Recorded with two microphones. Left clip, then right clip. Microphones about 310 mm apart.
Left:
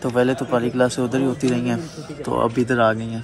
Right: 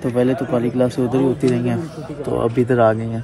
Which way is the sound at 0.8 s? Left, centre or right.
Centre.